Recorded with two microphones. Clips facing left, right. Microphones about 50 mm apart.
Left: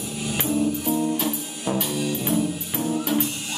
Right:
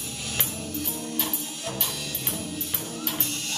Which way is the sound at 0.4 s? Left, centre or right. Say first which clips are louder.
Left 11 dB; centre.